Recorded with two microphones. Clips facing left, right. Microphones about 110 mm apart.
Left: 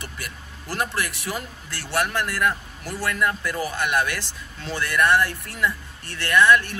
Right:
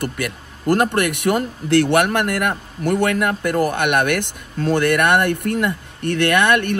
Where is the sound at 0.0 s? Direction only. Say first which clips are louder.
Right 12 dB; 55° right (ahead or behind).